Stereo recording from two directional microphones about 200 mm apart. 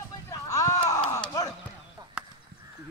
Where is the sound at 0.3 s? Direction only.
15° left (ahead or behind).